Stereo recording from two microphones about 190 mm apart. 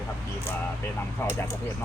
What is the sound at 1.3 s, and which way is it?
Speech, 15° left (ahead or behind).